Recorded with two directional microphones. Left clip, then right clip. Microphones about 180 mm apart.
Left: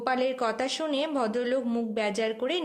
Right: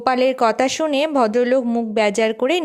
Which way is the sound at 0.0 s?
50° right (ahead or behind).